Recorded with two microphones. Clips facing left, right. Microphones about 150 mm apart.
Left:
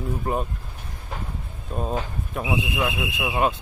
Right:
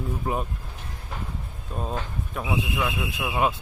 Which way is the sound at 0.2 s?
Centre (ahead or behind).